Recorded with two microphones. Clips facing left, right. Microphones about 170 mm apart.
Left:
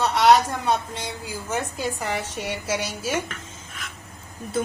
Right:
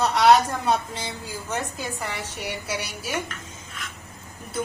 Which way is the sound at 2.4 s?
20° left (ahead or behind).